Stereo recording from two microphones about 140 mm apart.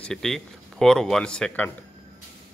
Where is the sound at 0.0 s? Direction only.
5° left (ahead or behind).